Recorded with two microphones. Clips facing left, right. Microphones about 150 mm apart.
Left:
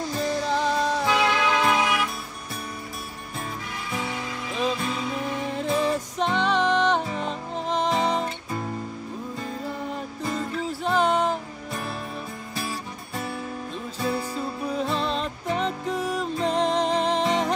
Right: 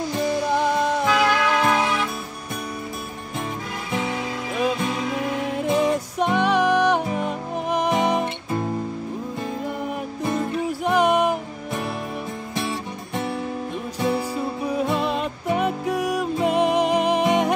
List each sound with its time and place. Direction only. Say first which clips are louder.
0.1 s music: right 3 dB; 15° right (ahead or behind)
1.0 s music: right 3 dB; 25° left (ahead or behind)
5.6 s music: right 4 dB; 15° right (ahead or behind)
9.8 s music: right 4 dB; 15° right (ahead or behind)
12.5 s music: right 5 dB; 25° right (ahead or behind)
13.9 s music: right 4 dB; 15° right (ahead or behind)